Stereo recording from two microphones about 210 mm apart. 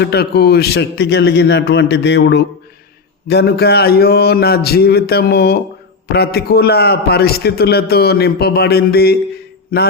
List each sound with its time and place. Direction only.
0.0 s a man's voice: 50° left (ahead or behind)